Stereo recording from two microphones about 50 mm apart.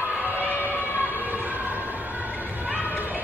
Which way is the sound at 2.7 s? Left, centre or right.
Right.